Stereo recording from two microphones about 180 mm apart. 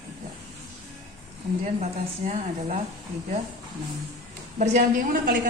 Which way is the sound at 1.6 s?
40° right (ahead or behind).